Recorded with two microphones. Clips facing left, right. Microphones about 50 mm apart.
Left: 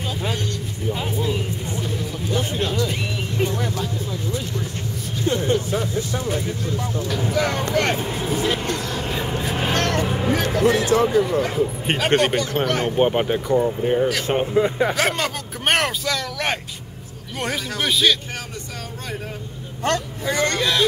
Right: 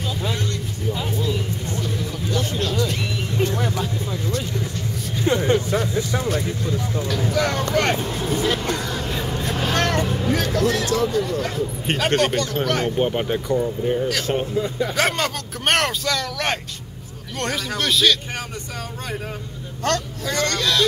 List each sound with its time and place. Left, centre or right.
0.8 s music: left
2.3 s a sound: left
3.5 s vehicle: right
5.2 s speech: right
7.2 s a man's voice: centre
8.6 s a sound: centre
9.0 s a sound: left
9.6 s vehicle: left
10.6 s a man's voice: left
15.0 s a man's voice: centre
19.8 s a man's voice: centre